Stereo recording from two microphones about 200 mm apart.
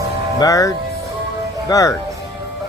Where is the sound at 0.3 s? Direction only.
15° left (ahead or behind).